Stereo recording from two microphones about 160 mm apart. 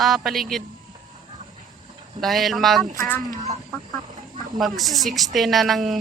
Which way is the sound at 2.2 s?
Centre (ahead or behind).